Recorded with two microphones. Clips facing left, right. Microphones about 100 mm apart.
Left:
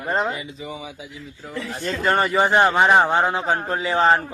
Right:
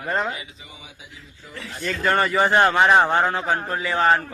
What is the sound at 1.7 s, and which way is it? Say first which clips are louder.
A man's voice: left 1 dB; 25° left (ahead or behind).